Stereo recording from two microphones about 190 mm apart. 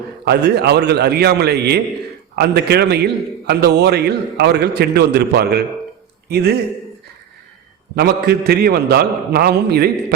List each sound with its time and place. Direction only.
0.3 s a man's voice: 60° right (ahead or behind)
7.9 s a man's voice: 55° right (ahead or behind)